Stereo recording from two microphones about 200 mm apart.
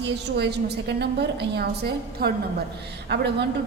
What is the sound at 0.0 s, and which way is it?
A woman's voice, 55° right (ahead or behind).